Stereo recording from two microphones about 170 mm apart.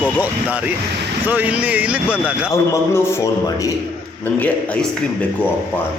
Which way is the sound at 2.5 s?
15° left (ahead or behind).